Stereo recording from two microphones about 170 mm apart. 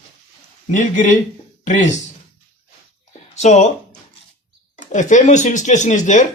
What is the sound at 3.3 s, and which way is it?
Speech, 40° left (ahead or behind).